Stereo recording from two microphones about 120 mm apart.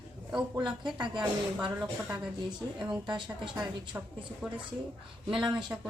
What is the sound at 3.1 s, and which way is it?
Speech, 40° right (ahead or behind).